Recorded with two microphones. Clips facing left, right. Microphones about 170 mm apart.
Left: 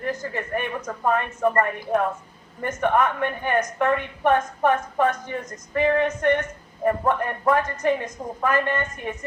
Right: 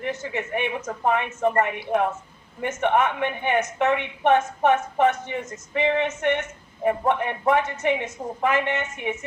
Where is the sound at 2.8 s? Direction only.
20° right (ahead or behind).